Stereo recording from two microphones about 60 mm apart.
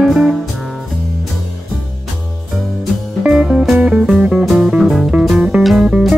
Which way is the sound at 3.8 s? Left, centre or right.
Right.